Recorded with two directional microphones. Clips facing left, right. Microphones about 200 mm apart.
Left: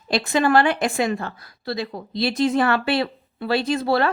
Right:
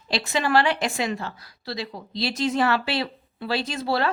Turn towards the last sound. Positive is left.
turn(degrees=55)  # may be behind; listen again after turning